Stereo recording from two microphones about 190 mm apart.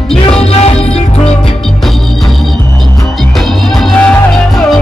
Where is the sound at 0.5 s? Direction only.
35° left (ahead or behind).